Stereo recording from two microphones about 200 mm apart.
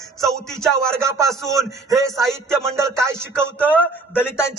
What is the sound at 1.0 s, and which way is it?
Speech, 15° right (ahead or behind).